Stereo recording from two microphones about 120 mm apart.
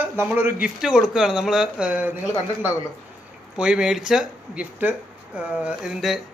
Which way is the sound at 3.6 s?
5° right (ahead or behind).